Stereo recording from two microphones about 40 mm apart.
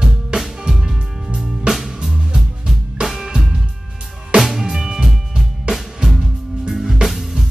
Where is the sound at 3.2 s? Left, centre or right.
Centre.